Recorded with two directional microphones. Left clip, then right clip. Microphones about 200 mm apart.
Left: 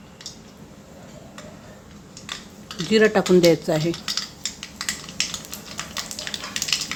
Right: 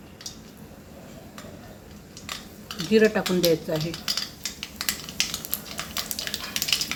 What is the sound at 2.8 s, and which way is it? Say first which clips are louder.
Speech: left 3 dB; 55° left (ahead or behind).